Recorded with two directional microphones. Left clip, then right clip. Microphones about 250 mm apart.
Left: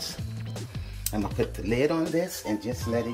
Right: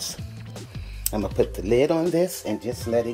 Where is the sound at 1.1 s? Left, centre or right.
Right.